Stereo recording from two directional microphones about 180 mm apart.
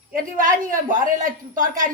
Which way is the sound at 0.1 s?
45° right (ahead or behind).